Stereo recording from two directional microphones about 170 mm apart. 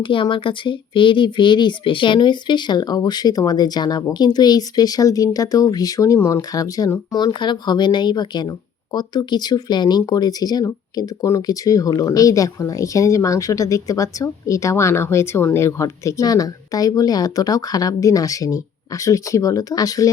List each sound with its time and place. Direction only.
0.0 s speech: 30° left (ahead or behind)